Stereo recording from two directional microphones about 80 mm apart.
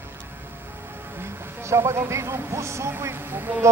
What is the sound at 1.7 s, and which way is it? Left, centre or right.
Speech, right.